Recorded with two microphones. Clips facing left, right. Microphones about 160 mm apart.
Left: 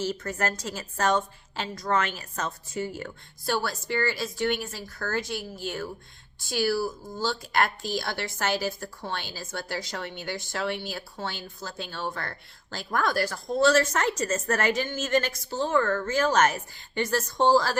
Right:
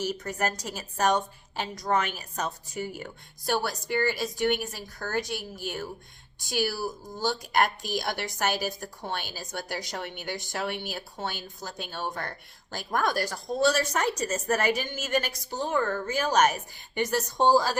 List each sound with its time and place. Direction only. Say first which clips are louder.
0.0 s a woman's voice: left 1 dB; 15° right (ahead or behind)